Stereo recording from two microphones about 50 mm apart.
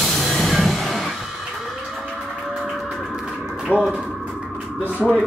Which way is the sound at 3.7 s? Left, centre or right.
Left.